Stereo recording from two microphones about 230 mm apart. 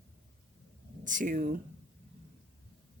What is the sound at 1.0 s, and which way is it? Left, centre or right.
Speech, right.